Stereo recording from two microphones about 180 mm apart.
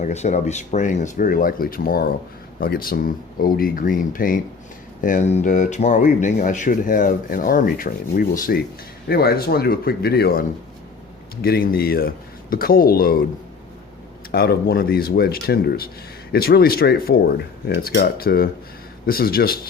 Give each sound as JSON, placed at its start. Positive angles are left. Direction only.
{"t": 0.0, "sound": "speech", "side_deg": 40}
{"t": 11.4, "sound": "speech", "side_deg": 60}
{"t": 14.3, "sound": "speech", "side_deg": 60}